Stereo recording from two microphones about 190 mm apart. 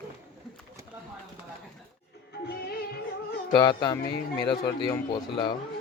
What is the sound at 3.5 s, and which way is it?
Speech, 20° left (ahead or behind).